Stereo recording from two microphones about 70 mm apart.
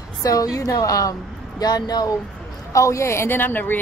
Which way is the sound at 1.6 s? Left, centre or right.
Left.